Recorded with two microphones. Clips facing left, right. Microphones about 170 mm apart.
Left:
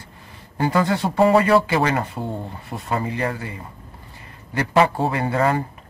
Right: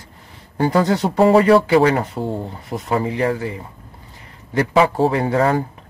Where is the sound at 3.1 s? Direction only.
65° right (ahead or behind).